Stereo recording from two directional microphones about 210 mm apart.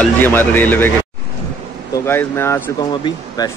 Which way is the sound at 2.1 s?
10° left (ahead or behind).